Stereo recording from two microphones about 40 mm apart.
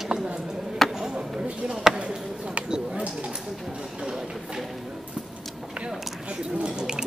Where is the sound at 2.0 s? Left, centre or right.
Right.